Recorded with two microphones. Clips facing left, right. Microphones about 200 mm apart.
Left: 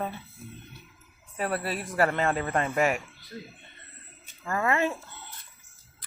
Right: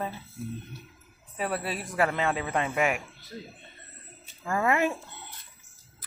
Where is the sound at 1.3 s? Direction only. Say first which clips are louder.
Left 1 dB; centre (ahead or behind).